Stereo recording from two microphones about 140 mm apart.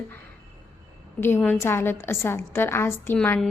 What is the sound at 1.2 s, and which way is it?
A woman's voice, 15° left (ahead or behind).